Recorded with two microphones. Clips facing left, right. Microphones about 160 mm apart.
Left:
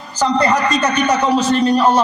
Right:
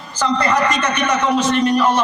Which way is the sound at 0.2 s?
35° left (ahead or behind).